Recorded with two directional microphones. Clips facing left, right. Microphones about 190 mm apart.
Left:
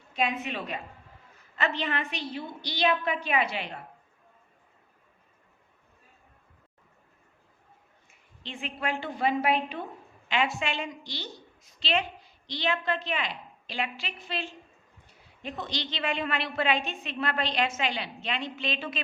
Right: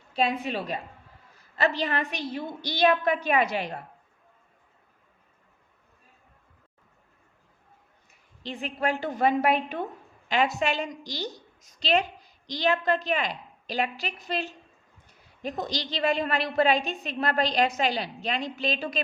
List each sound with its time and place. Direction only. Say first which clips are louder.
0.1 s a woman's voice: right 3 dB; 35° right (ahead or behind)
8.4 s a woman's voice: right 4 dB; 40° right (ahead or behind)